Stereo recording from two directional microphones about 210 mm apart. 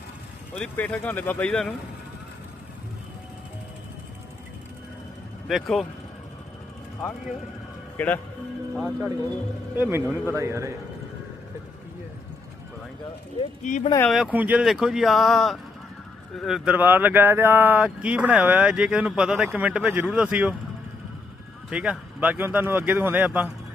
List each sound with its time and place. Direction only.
0.5 s speech: 5° left (ahead or behind)
5.5 s speech: centre (ahead or behind)
7.9 s a man's voice: 5° left (ahead or behind)
9.7 s speech: 10° right (ahead or behind)
13.6 s speech: 35° left (ahead or behind)
14.1 s speech: 5° right (ahead or behind)
21.7 s speech: 5° right (ahead or behind)